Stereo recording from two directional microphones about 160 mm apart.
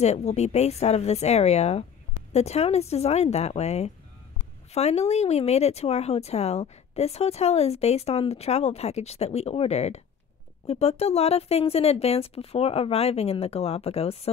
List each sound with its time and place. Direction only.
0.0 s a woman's voice: 45° left (ahead or behind)